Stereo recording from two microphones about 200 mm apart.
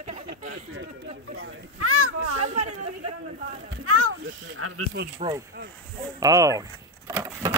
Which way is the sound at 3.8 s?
90° right.